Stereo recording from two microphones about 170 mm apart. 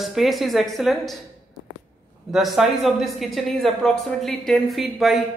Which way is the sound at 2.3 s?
Centre (ahead or behind).